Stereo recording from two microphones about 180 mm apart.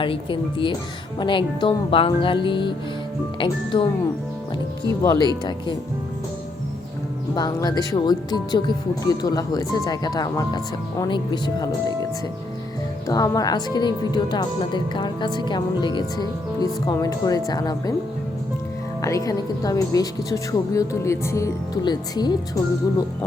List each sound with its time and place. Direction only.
0.0 s speech: 30° left (ahead or behind)
4.9 s speech: 20° left (ahead or behind)
7.3 s speech: 20° left (ahead or behind)
13.1 s speech: 20° left (ahead or behind)
19.0 s speech: 20° left (ahead or behind)